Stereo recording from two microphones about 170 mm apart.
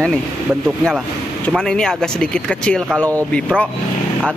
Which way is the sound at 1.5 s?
5° left (ahead or behind).